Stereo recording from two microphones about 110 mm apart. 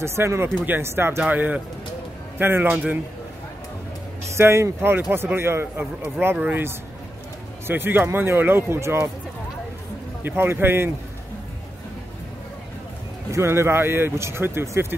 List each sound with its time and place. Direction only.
0.0 s a man's voice: 25° right (ahead or behind); by 3.0 s 10° right (ahead or behind)
4.4 s speech: 25° right (ahead or behind)
10.2 s speech: 20° right (ahead or behind)
13.3 s speech: 25° right (ahead or behind)